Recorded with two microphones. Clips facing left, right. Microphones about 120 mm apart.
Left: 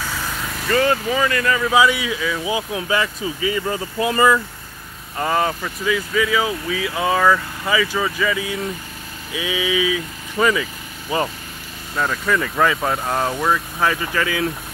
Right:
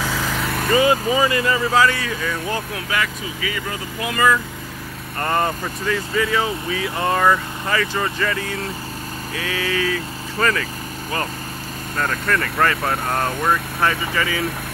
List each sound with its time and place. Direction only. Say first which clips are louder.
0.7 s speech: right 1 dB; 5° right (ahead or behind)
1.7 s speech: left 4 dB; 10° left (ahead or behind)
2.7 s speech: left 3 dB; 25° left (ahead or behind)
5.2 s speech: left 1 dB; 5° left (ahead or behind)